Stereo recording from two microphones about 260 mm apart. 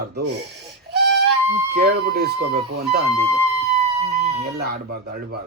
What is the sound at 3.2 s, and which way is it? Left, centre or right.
Music, right.